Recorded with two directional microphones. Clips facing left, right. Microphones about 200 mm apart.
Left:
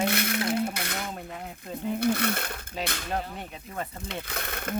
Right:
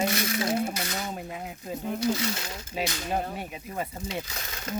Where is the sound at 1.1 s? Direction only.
5° right (ahead or behind).